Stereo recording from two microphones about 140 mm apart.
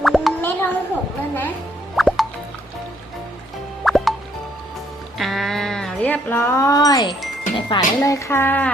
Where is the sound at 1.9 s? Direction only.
Centre (ahead or behind).